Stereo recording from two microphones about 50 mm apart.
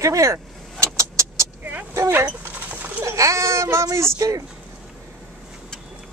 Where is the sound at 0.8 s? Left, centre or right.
Right.